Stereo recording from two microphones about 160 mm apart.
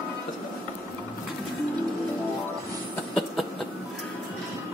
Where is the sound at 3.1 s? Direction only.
Centre (ahead or behind).